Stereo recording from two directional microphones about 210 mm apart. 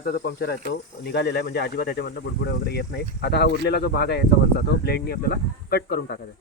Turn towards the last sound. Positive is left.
turn(degrees=50)  # may be behind; listen again after turning